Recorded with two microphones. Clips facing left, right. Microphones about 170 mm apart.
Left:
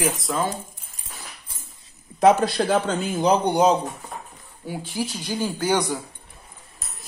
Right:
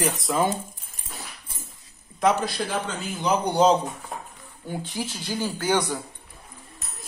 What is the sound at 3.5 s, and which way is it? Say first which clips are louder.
Speech: left 1 dB; 10° left (ahead or behind).